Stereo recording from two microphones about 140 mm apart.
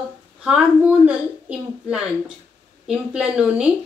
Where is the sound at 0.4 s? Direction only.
5° right (ahead or behind).